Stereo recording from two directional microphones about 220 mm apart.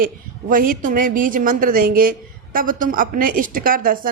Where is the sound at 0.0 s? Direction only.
40° right (ahead or behind).